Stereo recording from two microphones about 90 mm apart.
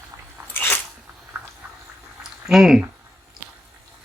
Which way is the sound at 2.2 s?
5° right (ahead or behind).